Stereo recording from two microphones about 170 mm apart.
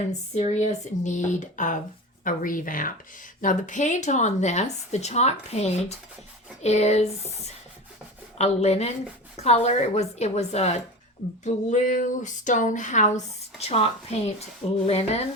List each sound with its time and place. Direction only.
0.3 s a woman's voice: 40° left (ahead or behind)
8.4 s a woman's voice: 40° left (ahead or behind)